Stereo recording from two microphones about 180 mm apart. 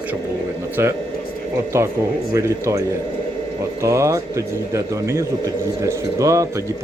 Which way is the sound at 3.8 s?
15° right (ahead or behind).